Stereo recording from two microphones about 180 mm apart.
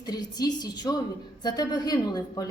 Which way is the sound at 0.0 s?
20° left (ahead or behind).